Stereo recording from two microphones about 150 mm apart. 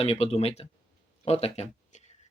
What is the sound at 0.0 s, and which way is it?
Speech, 40° left (ahead or behind).